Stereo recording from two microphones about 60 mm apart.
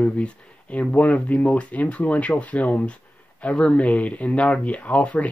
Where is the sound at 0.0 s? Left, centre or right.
Left.